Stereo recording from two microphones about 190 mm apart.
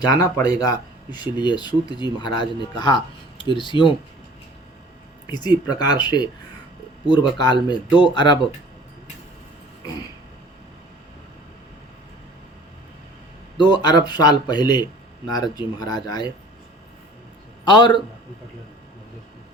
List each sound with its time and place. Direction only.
0.1 s speech: 20° left (ahead or behind)
5.2 s speech: 20° left (ahead or behind)
13.6 s speech: 25° left (ahead or behind)
17.7 s speech: 25° left (ahead or behind)